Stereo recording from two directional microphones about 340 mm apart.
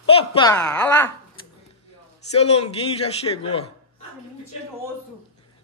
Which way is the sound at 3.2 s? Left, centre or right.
Centre.